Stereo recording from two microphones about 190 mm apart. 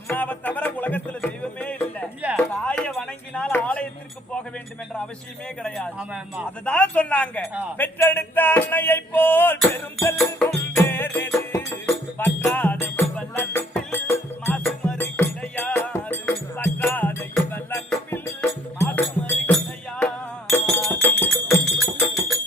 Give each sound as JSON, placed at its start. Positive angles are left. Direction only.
{"t": 0.1, "sound": "music", "side_deg": 10}
{"t": 5.6, "sound": "speech", "side_deg": 5}
{"t": 6.7, "sound": "a sound", "side_deg": 5}
{"t": 10.2, "sound": "music", "side_deg": 10}